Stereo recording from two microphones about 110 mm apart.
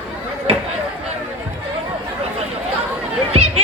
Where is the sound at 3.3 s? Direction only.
65° right (ahead or behind).